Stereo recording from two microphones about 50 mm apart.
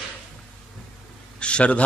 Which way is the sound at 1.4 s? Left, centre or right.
Left.